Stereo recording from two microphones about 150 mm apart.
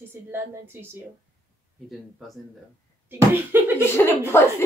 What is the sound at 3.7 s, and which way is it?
Speech, 15° left (ahead or behind).